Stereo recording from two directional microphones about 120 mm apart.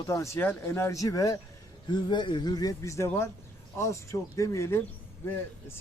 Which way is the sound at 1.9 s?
40° left (ahead or behind).